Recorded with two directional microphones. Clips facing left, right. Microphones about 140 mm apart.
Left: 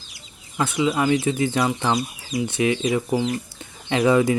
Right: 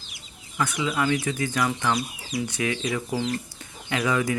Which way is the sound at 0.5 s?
25° left (ahead or behind).